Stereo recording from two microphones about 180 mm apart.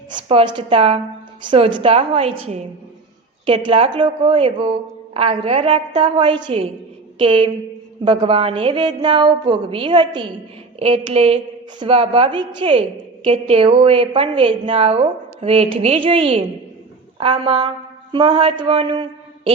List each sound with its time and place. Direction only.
0.1 s a woman's voice: 30° right (ahead or behind)